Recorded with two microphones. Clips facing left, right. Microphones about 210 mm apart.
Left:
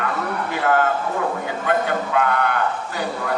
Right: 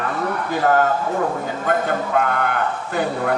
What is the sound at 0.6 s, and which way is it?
A man's voice, 40° right (ahead or behind).